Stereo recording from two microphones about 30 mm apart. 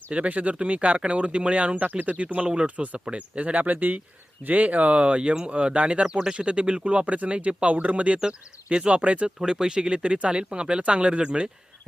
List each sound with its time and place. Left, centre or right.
0.1 s speech: right
1.8 s speech: right
2.2 s speech: right
3.0 s speech: right
4.4 s speech: right
8.3 s speech: right
8.9 s speech: right
9.4 s speech: right